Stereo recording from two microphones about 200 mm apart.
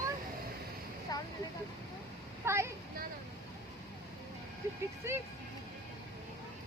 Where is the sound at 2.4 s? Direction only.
15° right (ahead or behind).